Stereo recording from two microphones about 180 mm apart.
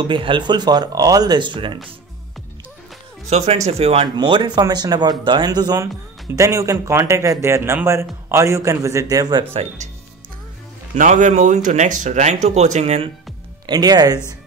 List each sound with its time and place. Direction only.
0.0 s speech: 25° right (ahead or behind)
3.3 s a man's voice: 35° right (ahead or behind)
9.5 s speech: 35° right (ahead or behind)
11.0 s speech: 45° right (ahead or behind)
13.7 s speech: 20° right (ahead or behind)